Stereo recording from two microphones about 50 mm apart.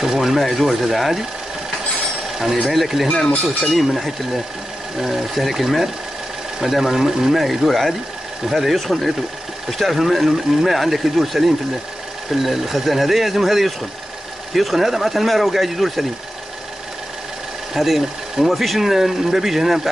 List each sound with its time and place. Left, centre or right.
0.0 s speech: centre
2.3 s speech: centre
17.7 s speech: centre